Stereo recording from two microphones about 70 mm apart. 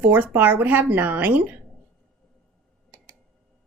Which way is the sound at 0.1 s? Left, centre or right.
Right.